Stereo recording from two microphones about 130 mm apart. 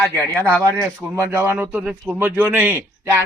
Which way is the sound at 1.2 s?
20° right (ahead or behind).